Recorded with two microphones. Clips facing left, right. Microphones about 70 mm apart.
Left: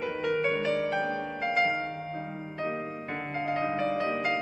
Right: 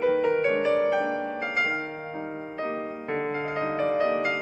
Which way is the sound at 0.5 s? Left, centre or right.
Right.